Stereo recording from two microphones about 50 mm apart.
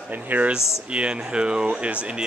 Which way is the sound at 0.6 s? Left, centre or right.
Left.